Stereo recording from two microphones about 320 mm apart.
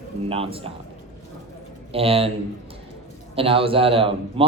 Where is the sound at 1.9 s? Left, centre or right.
Centre.